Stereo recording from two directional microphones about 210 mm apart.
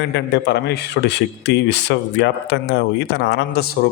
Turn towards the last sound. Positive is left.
turn(degrees=50)  # may be behind; listen again after turning